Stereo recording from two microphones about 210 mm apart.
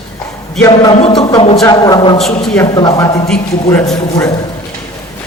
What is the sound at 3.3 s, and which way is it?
Speech, 5° left (ahead or behind).